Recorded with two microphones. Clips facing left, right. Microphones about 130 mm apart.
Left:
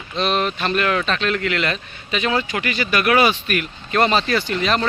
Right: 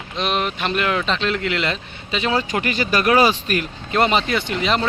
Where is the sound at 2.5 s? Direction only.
40° right (ahead or behind).